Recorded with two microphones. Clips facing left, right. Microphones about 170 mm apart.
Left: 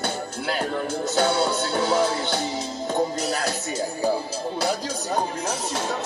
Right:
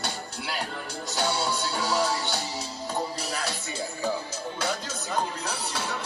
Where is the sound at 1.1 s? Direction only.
50° left (ahead or behind).